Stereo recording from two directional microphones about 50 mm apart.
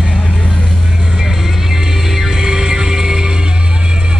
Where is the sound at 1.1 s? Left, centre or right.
Centre.